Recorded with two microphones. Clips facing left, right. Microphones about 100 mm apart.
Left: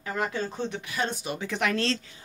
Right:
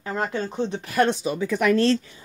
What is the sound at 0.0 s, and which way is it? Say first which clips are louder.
Speech: right 3 dB; 25° right (ahead or behind).